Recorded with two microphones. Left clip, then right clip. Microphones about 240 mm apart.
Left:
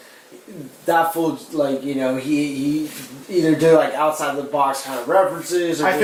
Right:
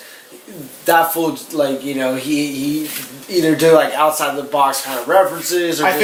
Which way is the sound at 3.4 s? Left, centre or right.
Centre.